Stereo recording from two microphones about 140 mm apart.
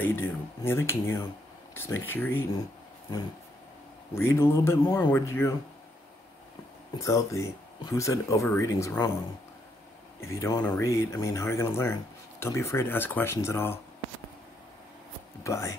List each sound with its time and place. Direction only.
0.0 s speech: 15° left (ahead or behind)
4.1 s speech: 15° left (ahead or behind)
7.0 s speech: 20° left (ahead or behind)
10.2 s speech: 20° left (ahead or behind)
15.4 s speech: 20° left (ahead or behind)